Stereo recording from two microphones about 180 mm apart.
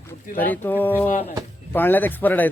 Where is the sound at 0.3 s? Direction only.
10° left (ahead or behind).